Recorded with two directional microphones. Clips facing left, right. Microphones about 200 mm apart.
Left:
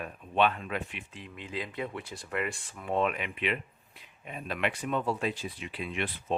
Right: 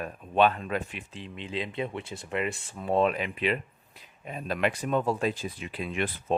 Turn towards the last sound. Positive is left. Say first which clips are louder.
# right 4 dB
turn(degrees=-45)  # may be behind; listen again after turning